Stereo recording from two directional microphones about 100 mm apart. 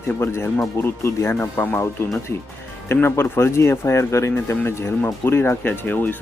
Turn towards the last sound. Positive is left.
turn(degrees=20)  # may be behind; listen again after turning